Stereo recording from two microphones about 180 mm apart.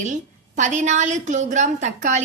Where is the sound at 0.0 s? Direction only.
40° right (ahead or behind).